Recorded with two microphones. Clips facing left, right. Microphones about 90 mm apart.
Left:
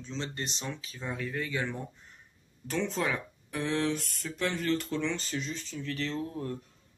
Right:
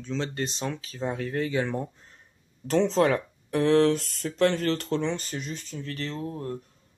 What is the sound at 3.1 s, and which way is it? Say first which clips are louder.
Speech: right 9 dB; 65° right (ahead or behind).